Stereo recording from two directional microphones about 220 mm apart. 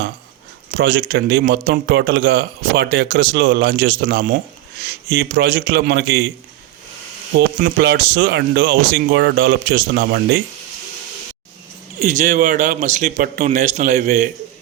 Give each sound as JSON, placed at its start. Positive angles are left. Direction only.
{"t": 0.7, "sound": "a man's voice", "side_deg": -45}
{"t": 7.6, "sound": "a man's voice", "side_deg": -45}
{"t": 11.9, "sound": "speech", "side_deg": -35}